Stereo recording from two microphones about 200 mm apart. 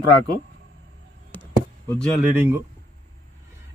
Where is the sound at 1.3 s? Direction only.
10° left (ahead or behind).